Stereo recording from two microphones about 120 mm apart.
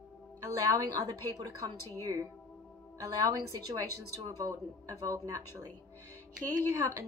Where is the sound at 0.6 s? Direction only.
30° right (ahead or behind).